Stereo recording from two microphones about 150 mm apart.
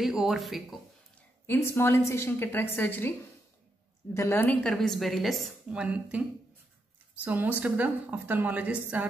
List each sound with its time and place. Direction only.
0.0 s a woman's voice: centre (ahead or behind)
1.5 s a woman's voice: 15° left (ahead or behind); by 6.2 s 5° right (ahead or behind)
7.2 s a woman's voice: 10° right (ahead or behind)